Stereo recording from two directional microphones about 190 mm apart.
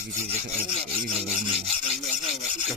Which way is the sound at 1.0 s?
45° right (ahead or behind).